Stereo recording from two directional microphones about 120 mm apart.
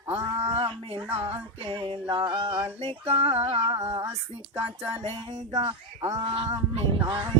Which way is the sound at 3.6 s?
25° right (ahead or behind).